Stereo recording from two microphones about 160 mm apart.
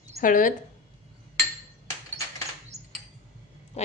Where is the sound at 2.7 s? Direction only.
45° right (ahead or behind).